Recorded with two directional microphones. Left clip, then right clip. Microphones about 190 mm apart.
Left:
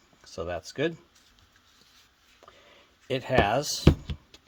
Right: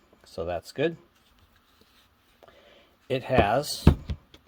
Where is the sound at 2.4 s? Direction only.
5° left (ahead or behind).